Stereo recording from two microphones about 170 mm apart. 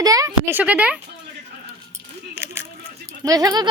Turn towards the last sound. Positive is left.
turn(degrees=-25)  # may be behind; listen again after turning